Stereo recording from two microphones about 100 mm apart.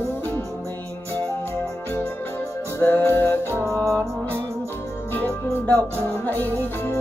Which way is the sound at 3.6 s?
30° right (ahead or behind).